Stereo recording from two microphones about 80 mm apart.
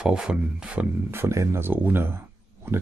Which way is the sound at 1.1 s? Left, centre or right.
Right.